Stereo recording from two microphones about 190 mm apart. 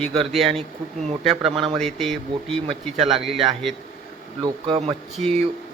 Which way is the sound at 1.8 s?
Centre (ahead or behind).